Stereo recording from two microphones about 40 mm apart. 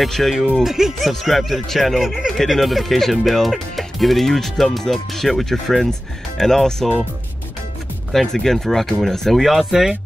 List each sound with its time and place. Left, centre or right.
0.0 s speech: centre
0.7 s speech: centre
8.1 s speech: centre
9.4 s speech: centre